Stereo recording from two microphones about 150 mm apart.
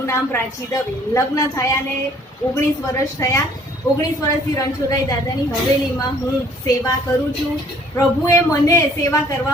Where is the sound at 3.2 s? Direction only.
20° left (ahead or behind).